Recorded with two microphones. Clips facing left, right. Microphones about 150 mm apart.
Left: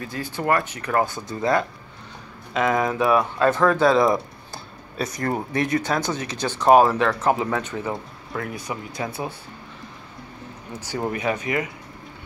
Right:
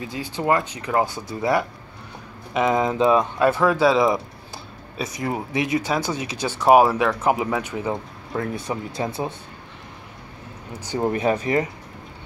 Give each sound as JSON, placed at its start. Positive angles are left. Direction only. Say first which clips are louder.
{"t": 0.0, "sound": "speech", "louder": "right 1 dB", "side_deg": -15}
{"t": 11.1, "sound": "speech", "louder": "right 4 dB", "side_deg": -30}